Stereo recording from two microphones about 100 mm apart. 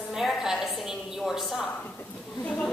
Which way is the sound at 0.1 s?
5° right (ahead or behind).